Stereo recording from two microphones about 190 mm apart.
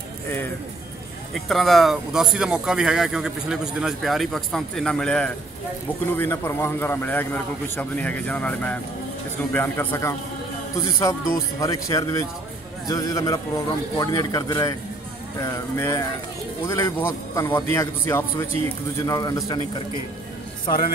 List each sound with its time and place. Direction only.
1.3 s a man's voice: centre (ahead or behind); by 19.6 s 20° left (ahead or behind)